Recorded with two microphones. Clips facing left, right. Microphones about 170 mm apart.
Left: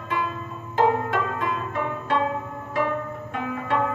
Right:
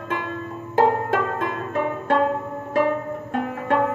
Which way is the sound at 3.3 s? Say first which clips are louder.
Right 4 dB; 40° right (ahead or behind).